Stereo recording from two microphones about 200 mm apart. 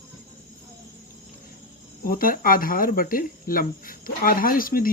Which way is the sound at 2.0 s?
45° left (ahead or behind).